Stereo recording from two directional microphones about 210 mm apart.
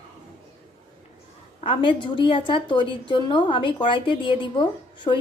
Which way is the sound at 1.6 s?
25° left (ahead or behind).